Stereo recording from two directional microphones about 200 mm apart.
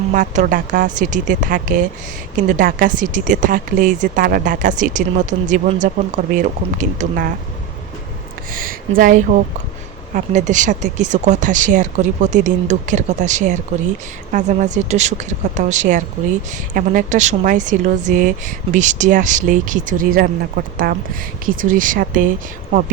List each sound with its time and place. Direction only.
0.1 s speech: 40° right (ahead or behind)
9.0 s speech: 45° right (ahead or behind)